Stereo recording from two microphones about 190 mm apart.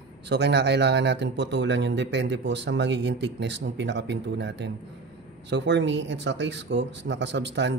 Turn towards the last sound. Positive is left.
turn(degrees=-65)  # may be behind; listen again after turning